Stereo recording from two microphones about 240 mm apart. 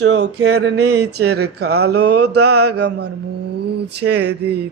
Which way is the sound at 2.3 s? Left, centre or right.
Right.